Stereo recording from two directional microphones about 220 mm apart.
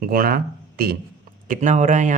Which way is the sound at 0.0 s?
45° right (ahead or behind).